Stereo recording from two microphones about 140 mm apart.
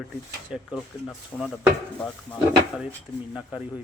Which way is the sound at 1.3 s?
15° left (ahead or behind).